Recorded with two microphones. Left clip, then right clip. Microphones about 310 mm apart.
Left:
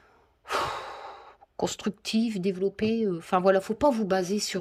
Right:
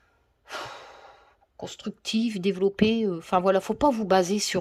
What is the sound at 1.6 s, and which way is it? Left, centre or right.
Speech, centre.